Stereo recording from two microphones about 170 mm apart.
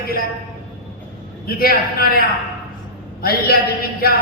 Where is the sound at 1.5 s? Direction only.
60° left (ahead or behind).